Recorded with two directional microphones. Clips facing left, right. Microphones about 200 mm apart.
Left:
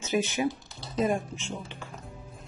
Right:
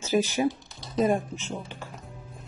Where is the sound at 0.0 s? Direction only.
35° right (ahead or behind).